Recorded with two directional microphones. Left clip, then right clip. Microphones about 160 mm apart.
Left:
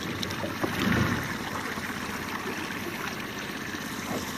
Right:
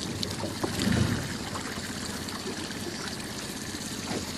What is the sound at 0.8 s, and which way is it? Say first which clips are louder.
Boat: left 3 dB; 30° left (ahead or behind).